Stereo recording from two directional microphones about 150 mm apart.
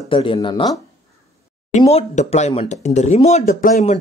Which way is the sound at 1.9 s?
45° left (ahead or behind).